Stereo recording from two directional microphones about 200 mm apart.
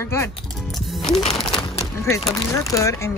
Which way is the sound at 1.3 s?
Centre (ahead or behind).